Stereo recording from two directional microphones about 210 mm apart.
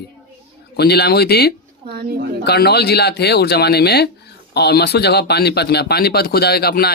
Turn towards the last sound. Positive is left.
turn(degrees=50)  # may be behind; listen again after turning